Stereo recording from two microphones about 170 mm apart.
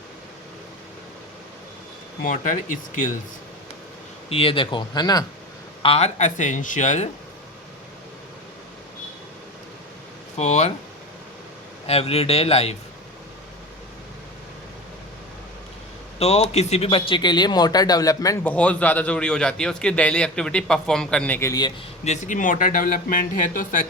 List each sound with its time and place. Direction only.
2.2 s speech: 50° left (ahead or behind)
4.3 s speech: 35° left (ahead or behind)
5.8 s speech: 35° left (ahead or behind)
10.3 s speech: 40° left (ahead or behind)
11.9 s speech: 35° left (ahead or behind)
16.1 s speech: 40° left (ahead or behind); by 18.3 s 20° left (ahead or behind)
18.4 s a man's voice: 10° left (ahead or behind)
22.0 s speech: 45° left (ahead or behind)